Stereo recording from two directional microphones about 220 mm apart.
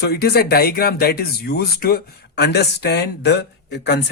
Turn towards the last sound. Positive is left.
turn(degrees=50)  # may be behind; listen again after turning